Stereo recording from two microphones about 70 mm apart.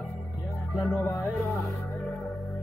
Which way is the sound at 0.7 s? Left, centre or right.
Centre.